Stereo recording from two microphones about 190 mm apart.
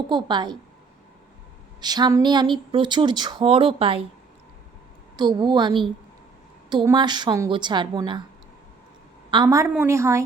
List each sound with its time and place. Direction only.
0.1 s speech: 25° right (ahead or behind)
1.8 s speech: 20° right (ahead or behind)
5.1 s speech: 25° right (ahead or behind)
9.3 s a woman's voice: 20° right (ahead or behind)